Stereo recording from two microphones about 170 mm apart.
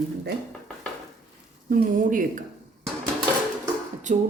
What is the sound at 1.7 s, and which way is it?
Speech, 55° right (ahead or behind).